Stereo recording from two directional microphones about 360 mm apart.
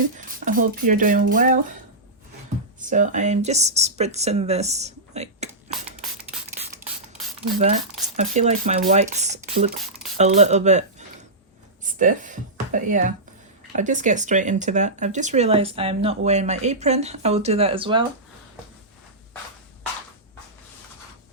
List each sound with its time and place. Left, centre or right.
0.0 s speech: right
2.8 s speech: right
8.1 s speech: centre